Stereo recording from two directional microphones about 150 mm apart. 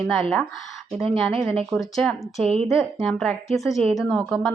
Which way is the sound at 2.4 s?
40° right (ahead or behind).